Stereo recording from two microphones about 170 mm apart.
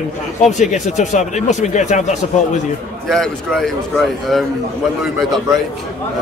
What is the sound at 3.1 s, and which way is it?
Speech, centre (ahead or behind).